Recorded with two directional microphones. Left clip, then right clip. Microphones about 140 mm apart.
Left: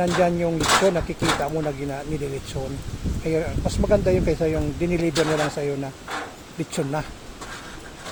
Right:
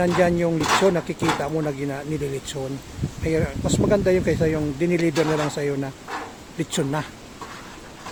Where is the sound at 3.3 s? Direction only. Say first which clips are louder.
Right 1 dB; 30° right (ahead or behind).